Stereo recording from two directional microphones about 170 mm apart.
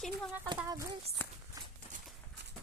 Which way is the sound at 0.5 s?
20° right (ahead or behind).